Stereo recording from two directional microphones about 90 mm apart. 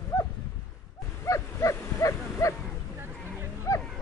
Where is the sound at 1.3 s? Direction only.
35° left (ahead or behind).